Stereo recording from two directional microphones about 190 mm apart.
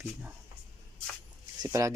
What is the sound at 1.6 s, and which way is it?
Speech, 15° right (ahead or behind).